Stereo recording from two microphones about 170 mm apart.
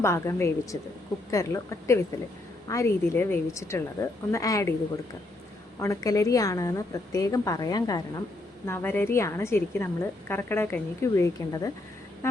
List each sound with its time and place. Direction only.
0.0 s a woman's voice: 15° left (ahead or behind)
5.8 s a woman's voice: 15° left (ahead or behind)